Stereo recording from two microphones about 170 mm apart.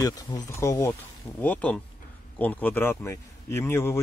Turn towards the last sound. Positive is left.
turn(degrees=15)  # may be behind; listen again after turning